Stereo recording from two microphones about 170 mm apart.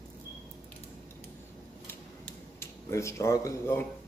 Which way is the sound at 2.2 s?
15° left (ahead or behind).